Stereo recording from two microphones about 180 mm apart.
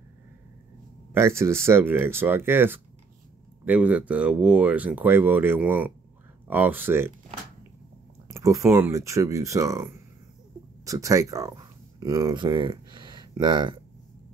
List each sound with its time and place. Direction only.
1.1 s speech: 15° right (ahead or behind)
8.3 s speech: 15° right (ahead or behind)